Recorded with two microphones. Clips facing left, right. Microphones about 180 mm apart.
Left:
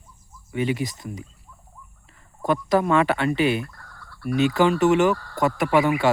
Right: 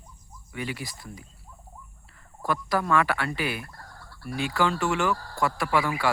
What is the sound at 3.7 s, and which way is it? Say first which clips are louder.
Fowl: right 1 dB; 40° right (ahead or behind).